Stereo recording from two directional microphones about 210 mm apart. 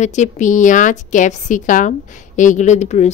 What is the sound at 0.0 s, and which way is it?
A woman's voice, 35° left (ahead or behind).